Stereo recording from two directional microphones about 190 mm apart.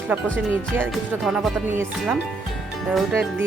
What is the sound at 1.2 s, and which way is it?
Speech, centre (ahead or behind).